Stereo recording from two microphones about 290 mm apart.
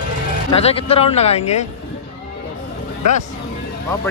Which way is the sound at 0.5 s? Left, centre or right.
Left.